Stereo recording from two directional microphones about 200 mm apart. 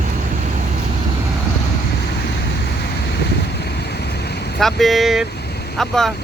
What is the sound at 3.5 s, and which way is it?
Vehicle, 55° left (ahead or behind).